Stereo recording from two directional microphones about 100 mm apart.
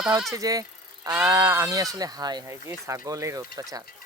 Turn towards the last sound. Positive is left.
turn(degrees=-35)  # may be behind; listen again after turning